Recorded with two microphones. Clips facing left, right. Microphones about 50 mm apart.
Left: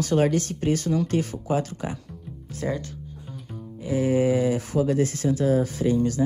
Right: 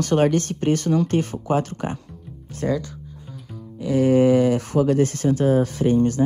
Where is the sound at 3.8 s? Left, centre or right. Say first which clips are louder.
Right 5 dB; right.